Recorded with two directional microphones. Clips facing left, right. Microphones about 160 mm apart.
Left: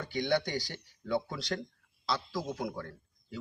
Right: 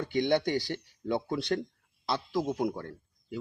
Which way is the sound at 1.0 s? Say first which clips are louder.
Right 3 dB; 25° right (ahead or behind).